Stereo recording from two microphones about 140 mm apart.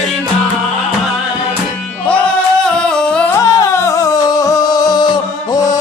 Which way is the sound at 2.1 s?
10° left (ahead or behind).